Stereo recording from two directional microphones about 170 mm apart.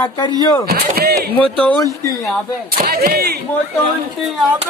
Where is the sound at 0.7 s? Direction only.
65° right (ahead or behind).